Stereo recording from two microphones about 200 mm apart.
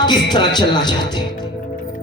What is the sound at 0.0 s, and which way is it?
A man's voice, 20° left (ahead or behind).